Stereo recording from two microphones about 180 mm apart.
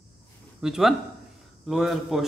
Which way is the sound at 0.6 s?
Centre (ahead or behind).